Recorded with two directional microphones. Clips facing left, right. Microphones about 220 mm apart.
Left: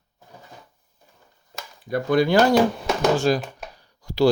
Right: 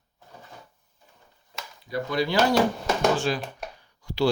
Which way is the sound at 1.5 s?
50° left (ahead or behind).